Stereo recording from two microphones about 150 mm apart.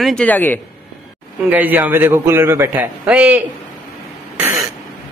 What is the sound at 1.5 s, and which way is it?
A man's voice, 10° right (ahead or behind).